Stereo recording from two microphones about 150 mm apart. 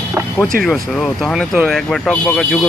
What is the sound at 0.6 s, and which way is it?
Speech, centre (ahead or behind).